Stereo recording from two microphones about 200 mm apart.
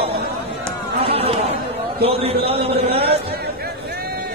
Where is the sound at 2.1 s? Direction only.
30° right (ahead or behind).